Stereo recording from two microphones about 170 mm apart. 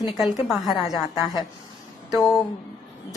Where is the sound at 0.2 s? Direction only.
Centre (ahead or behind).